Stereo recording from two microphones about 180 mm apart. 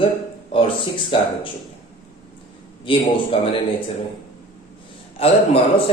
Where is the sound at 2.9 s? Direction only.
30° left (ahead or behind).